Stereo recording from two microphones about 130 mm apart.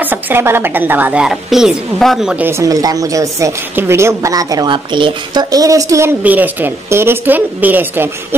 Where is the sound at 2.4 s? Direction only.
20° right (ahead or behind).